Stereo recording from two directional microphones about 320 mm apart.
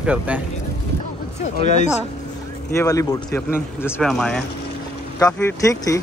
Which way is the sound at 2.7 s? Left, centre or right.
Centre.